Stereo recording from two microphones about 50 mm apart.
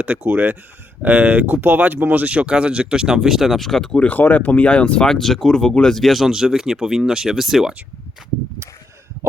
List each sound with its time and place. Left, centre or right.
0.0 s speech: right
1.6 s speech: right; by 3.9 s centre
3.9 s speech: left
5.0 s speech: centre